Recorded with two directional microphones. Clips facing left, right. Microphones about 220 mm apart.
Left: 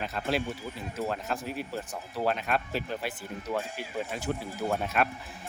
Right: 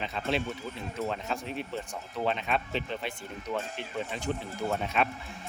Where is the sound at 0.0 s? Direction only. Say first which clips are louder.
Left 1 dB; 5° left (ahead or behind).